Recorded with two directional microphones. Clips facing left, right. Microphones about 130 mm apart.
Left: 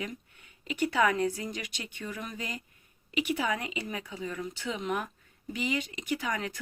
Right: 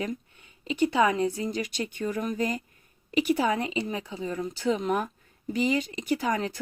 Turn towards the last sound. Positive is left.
turn(degrees=-35)  # may be behind; listen again after turning